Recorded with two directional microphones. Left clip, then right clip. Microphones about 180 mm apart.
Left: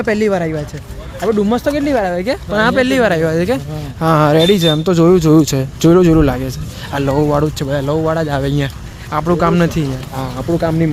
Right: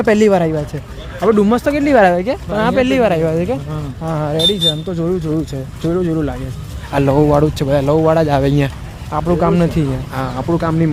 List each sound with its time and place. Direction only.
0.0 s speech: 20° right (ahead or behind)
1.5 s speech: 5° right (ahead or behind)
2.2 s speech: 5° left (ahead or behind)
4.0 s speech: 35° left (ahead or behind)
6.9 s speech: 10° right (ahead or behind)
9.0 s speech: centre (ahead or behind)